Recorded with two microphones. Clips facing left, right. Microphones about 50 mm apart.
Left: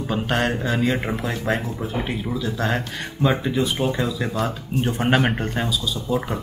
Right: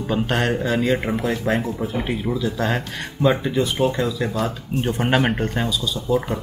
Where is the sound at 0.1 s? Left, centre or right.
Centre.